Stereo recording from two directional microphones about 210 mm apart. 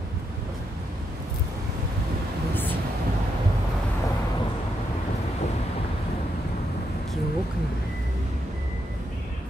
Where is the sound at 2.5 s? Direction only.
10° left (ahead or behind).